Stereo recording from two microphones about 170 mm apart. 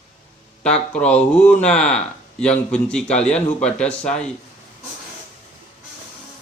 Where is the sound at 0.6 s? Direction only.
5° left (ahead or behind).